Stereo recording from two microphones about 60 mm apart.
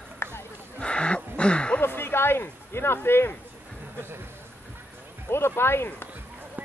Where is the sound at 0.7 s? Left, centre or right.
Centre.